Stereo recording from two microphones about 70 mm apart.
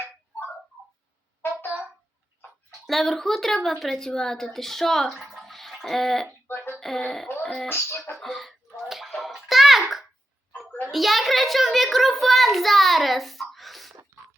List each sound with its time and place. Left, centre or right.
1.4 s a sound: left
2.8 s speech: centre
5.2 s a sound: centre
6.5 s music: left
6.7 s speech: centre
7.4 s music: centre
7.7 s music: left
8.2 s bathtub: centre
10.7 s a sound: left
10.9 s a child's voice: centre